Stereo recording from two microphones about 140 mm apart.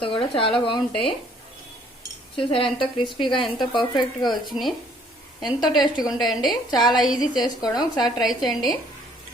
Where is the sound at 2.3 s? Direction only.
40° left (ahead or behind).